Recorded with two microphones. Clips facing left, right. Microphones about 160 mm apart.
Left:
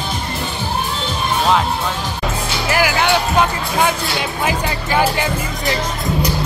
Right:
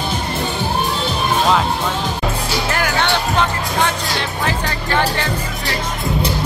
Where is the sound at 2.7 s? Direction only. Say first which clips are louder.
Left 4 dB; 5° left (ahead or behind).